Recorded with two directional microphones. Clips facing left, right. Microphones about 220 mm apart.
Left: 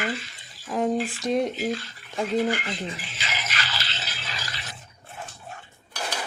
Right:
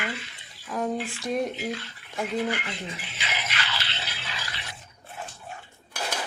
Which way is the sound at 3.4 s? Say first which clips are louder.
Even; 40° left (ahead or behind).